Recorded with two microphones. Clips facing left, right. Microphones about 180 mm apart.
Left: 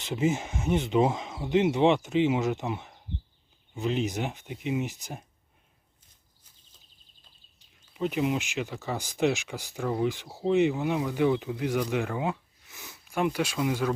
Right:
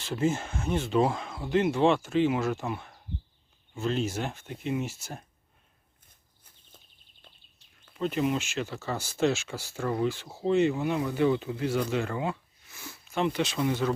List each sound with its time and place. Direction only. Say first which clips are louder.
0.0 s speech: left 1 dB; 20° left (ahead or behind)
7.9 s speech: even; 15° left (ahead or behind)